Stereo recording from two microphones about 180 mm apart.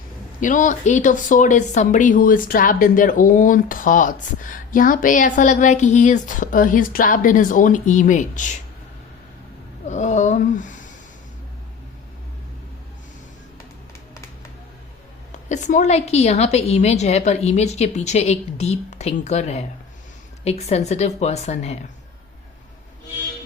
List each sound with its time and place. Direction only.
0.3 s speech: 45° left (ahead or behind)
9.8 s speech: 40° left (ahead or behind)
15.4 s a woman's voice: 40° left (ahead or behind)